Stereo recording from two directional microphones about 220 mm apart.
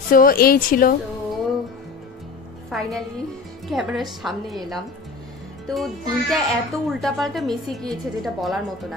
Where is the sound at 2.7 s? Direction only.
Centre (ahead or behind).